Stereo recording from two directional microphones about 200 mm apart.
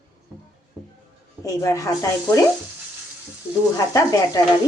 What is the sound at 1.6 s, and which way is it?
Speech, 15° left (ahead or behind).